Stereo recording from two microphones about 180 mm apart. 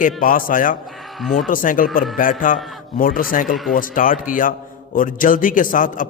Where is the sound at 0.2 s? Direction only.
50° left (ahead or behind).